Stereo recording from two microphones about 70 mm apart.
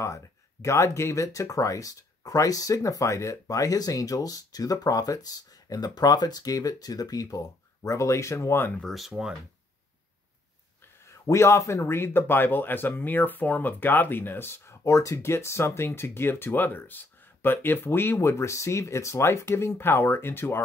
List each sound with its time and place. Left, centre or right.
0.0 s speech: left
8.8 s speech: centre
11.2 s speech: left
14.9 s speech: left